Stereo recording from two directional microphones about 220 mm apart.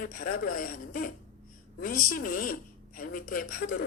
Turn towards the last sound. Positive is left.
turn(degrees=40)  # may be behind; listen again after turning